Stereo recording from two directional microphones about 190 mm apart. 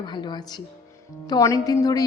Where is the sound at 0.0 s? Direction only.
25° left (ahead or behind).